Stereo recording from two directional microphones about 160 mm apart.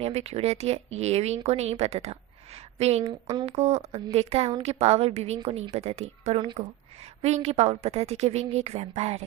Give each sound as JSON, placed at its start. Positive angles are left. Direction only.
{"t": 0.0, "sound": "a woman's voice", "side_deg": -40}
{"t": 3.0, "sound": "speech", "side_deg": -25}
{"t": 3.4, "sound": "a woman's voice", "side_deg": -40}